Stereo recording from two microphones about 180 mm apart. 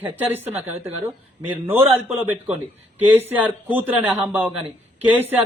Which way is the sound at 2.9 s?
10° right (ahead or behind).